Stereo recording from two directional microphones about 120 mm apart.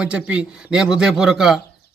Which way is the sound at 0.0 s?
10° right (ahead or behind).